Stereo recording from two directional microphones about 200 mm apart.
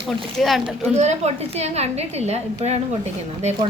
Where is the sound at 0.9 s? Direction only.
35° right (ahead or behind).